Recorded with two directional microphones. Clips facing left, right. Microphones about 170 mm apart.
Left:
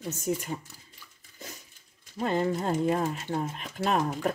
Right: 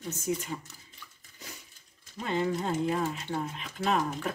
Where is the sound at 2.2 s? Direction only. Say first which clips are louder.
Left 3 dB; 40° left (ahead or behind).